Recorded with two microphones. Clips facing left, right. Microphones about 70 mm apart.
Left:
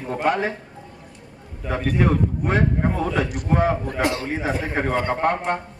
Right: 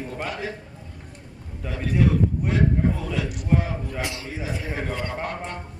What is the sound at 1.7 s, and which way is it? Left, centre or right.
A man's voice, left.